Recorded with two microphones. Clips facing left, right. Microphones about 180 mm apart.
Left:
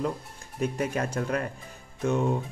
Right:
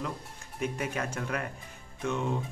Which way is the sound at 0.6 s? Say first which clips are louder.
Left 5 dB; 35° left (ahead or behind).